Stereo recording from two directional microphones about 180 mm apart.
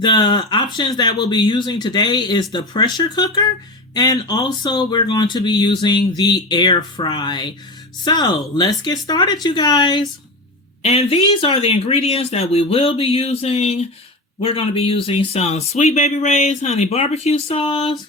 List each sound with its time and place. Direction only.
0.0 s speech: 25° left (ahead or behind)
10.8 s speech: 35° left (ahead or behind)